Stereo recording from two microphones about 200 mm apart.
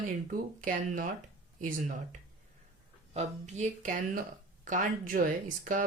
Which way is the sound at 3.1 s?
35° right (ahead or behind).